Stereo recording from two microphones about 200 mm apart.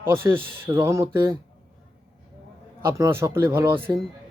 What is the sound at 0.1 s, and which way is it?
Speech, 10° right (ahead or behind).